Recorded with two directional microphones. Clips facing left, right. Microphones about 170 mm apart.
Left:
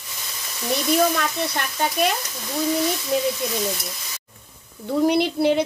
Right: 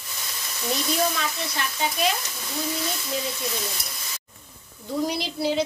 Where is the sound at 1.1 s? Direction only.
55° left (ahead or behind).